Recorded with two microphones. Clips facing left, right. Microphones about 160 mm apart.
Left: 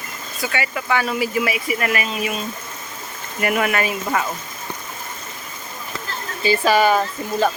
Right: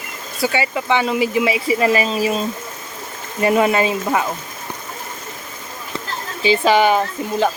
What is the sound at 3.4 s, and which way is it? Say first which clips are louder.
Speech: right 5 dB; 25° right (ahead or behind).